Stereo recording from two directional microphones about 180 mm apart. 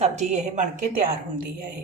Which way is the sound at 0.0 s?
40° right (ahead or behind).